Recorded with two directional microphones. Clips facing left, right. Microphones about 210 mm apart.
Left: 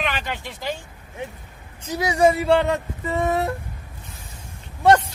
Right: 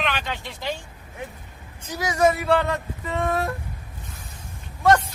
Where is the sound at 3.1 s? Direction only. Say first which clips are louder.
Left 3 dB; 15° left (ahead or behind).